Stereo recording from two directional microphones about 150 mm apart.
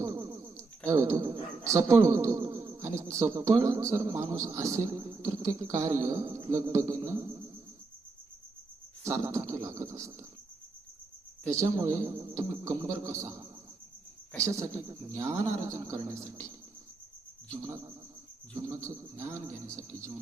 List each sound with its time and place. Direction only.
0.0 s a sound: 25° right (ahead or behind)
0.9 s a man's voice: 20° right (ahead or behind)
9.0 s a man's voice: 20° right (ahead or behind)
11.4 s a man's voice: 20° right (ahead or behind)
17.6 s a man's voice: 20° right (ahead or behind)